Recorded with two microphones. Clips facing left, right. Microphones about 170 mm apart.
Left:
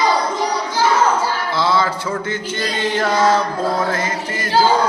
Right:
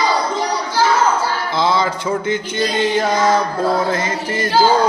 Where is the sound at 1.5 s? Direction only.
15° right (ahead or behind).